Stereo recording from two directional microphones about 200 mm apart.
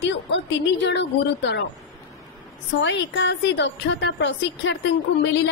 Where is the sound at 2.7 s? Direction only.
65° left (ahead or behind).